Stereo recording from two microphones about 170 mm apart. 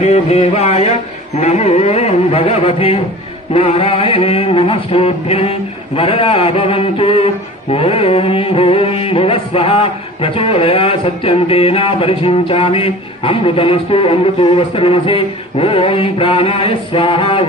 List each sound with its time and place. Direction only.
0.0 s music: 40° left (ahead or behind)